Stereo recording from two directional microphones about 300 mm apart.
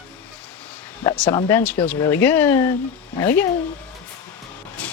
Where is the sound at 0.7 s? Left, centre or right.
Centre.